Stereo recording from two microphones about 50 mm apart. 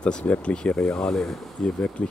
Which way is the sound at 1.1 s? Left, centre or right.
Centre.